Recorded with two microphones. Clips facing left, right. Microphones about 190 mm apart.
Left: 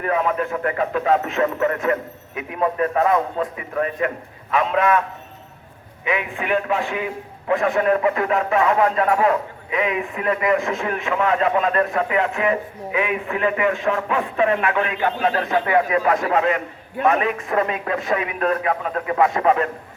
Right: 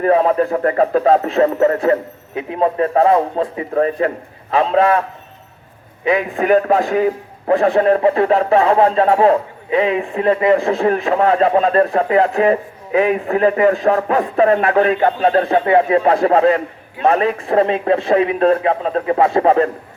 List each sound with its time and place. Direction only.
0.0 s a man's voice: 35° right (ahead or behind)
6.1 s a man's voice: 40° right (ahead or behind)